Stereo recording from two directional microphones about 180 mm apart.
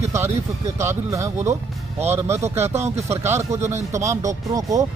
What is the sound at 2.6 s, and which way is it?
Speech, 15° right (ahead or behind).